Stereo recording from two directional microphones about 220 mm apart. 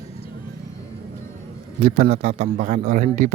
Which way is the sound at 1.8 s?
30° right (ahead or behind).